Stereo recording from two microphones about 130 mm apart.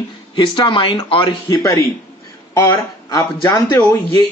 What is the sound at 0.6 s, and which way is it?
Speech, 40° left (ahead or behind).